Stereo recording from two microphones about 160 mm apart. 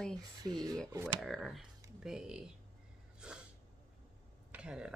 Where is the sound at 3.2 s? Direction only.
5° right (ahead or behind).